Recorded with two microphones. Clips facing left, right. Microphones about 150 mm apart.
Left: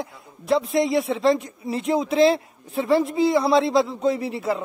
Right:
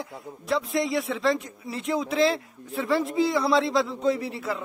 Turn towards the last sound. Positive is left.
turn(degrees=20)  # may be behind; listen again after turning